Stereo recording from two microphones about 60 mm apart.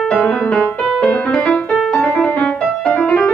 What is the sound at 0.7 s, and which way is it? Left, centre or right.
Music, centre.